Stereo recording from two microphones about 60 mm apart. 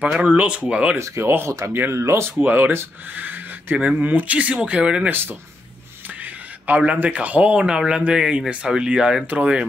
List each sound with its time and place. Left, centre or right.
0.0 s speech: right
0.9 s speech: right
1.7 s speech: right
2.0 s speech: right
2.4 s speech: right; by 5.1 s centre
6.7 s speech: right